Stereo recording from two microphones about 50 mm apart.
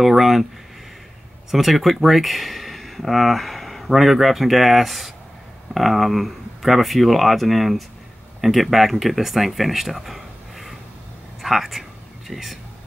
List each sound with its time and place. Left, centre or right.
0.0 s speech: centre
1.5 s speech: centre